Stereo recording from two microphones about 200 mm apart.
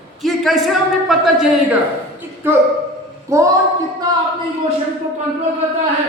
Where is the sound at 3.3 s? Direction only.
15° right (ahead or behind).